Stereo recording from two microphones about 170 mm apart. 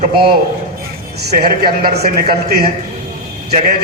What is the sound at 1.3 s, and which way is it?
Speech, 65° right (ahead or behind).